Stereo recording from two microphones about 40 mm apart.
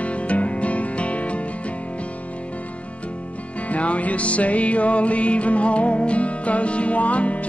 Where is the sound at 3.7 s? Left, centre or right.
Left.